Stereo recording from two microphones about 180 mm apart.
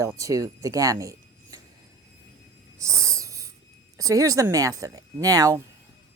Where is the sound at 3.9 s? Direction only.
20° right (ahead or behind).